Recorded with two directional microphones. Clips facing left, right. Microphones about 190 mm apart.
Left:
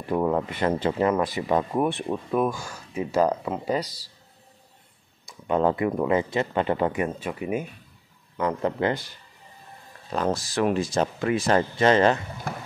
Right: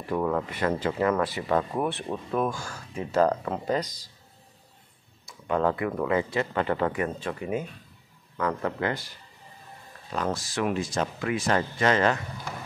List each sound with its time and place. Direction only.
0.1 s speech: 20° left (ahead or behind)
5.2 s speech: 20° left (ahead or behind)
8.4 s speech: 20° left (ahead or behind)
10.1 s speech: 35° left (ahead or behind)